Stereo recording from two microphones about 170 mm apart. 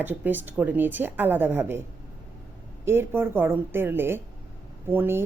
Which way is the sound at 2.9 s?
15° right (ahead or behind).